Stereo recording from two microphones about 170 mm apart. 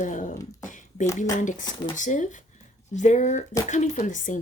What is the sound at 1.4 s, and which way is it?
Speech, 45° left (ahead or behind).